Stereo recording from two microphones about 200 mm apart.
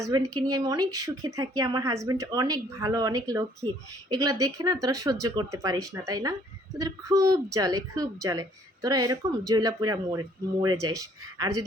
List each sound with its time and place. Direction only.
0.0 s a woman's voice: 20° right (ahead or behind)